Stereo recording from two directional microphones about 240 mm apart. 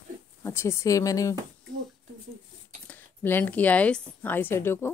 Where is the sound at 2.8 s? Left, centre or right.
Centre.